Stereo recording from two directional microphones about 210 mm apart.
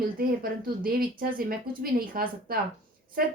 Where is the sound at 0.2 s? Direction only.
45° right (ahead or behind).